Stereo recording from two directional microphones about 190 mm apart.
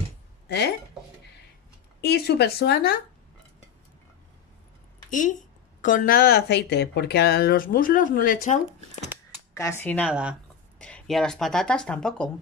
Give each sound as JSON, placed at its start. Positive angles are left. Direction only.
{"t": 2.0, "sound": "speech", "side_deg": 55}
{"t": 5.1, "sound": "a woman's voice", "side_deg": 40}
{"t": 9.5, "sound": "speech", "side_deg": 15}
{"t": 10.0, "sound": "speech", "side_deg": -5}